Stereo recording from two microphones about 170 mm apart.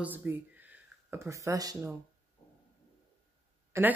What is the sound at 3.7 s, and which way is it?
Speech, 15° right (ahead or behind).